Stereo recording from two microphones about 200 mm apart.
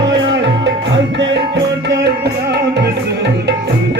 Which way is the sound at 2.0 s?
55° right (ahead or behind).